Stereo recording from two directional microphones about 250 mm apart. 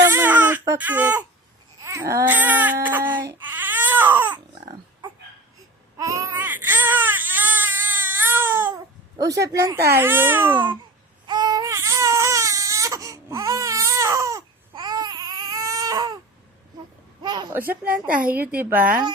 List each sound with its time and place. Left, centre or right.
0.0 s baby cry: centre
9.4 s speech: centre
11.3 s baby cry: centre
17.2 s speech: centre
18.8 s speech: right